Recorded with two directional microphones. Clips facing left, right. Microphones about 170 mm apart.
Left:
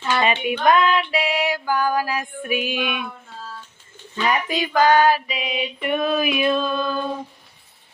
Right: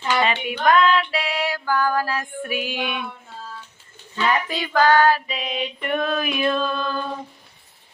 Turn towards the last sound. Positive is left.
turn(degrees=10)  # may be behind; listen again after turning